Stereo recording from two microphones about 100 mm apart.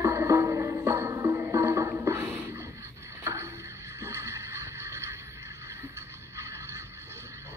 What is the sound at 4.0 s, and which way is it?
Vehicle, 30° right (ahead or behind).